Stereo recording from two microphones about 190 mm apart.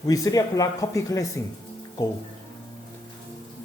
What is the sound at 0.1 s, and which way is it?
A man's voice, 20° left (ahead or behind).